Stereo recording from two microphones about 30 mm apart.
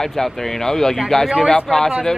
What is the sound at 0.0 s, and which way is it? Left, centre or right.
Speech, centre.